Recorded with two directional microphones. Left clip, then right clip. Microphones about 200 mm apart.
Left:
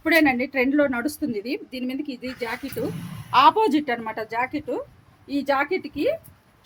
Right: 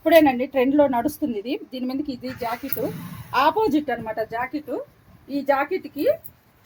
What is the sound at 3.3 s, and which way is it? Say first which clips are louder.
A woman's voice: left 3 dB; 20° left (ahead or behind).